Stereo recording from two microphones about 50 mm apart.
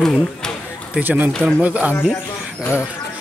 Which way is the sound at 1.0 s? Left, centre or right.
Right.